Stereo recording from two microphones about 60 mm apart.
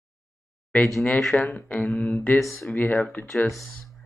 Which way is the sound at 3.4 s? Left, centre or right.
Centre.